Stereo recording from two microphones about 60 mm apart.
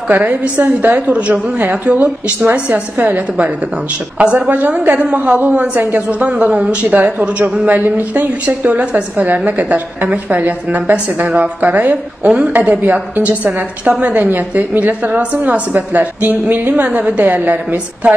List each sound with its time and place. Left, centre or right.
0.1 s a woman's voice: right
16.8 s a woman's voice: right
17.2 s a woman's voice: right